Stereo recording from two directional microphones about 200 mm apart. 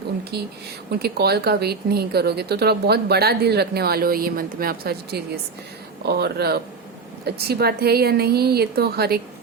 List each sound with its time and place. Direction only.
0.3 s speech: 55° right (ahead or behind)